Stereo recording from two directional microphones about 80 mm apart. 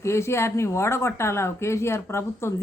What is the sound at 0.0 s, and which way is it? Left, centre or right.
Speech, left.